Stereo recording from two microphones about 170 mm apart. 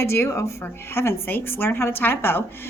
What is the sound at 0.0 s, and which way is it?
A woman's voice, 15° left (ahead or behind).